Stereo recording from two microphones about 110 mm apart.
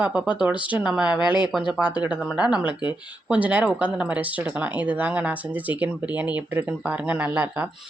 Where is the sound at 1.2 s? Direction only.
45° left (ahead or behind).